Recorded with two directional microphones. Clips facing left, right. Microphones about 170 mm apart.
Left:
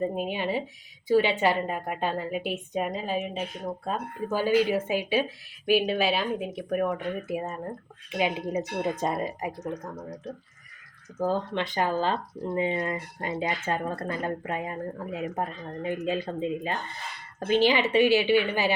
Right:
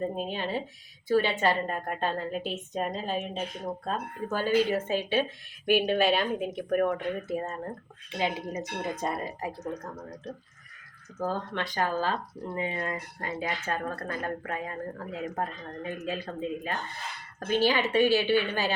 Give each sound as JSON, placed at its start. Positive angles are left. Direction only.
{"t": 0.0, "sound": "a woman's voice", "side_deg": 10}
{"t": 9.8, "sound": "speech", "side_deg": 0}
{"t": 11.2, "sound": "a woman's voice", "side_deg": 20}